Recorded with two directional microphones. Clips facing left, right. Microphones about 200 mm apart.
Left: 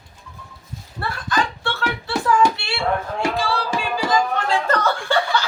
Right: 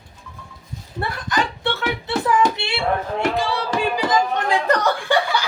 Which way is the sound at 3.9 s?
20° right (ahead or behind).